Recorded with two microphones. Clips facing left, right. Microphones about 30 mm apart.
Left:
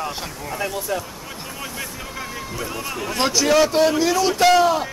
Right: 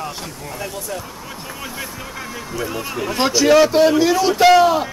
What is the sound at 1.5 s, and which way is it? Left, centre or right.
Speech, centre.